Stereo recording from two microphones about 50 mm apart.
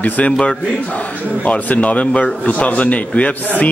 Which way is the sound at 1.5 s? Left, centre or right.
Left.